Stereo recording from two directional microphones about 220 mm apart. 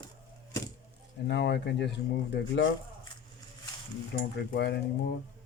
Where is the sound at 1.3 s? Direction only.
50° left (ahead or behind).